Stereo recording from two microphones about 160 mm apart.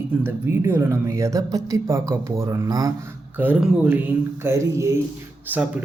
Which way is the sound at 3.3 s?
10° right (ahead or behind).